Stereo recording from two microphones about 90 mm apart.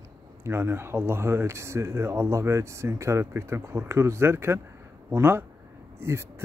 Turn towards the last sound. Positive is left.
turn(degrees=-30)  # may be behind; listen again after turning